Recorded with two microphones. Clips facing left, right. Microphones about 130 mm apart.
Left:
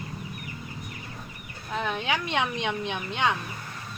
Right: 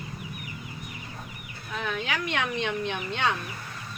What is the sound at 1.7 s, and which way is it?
Speech, 25° left (ahead or behind).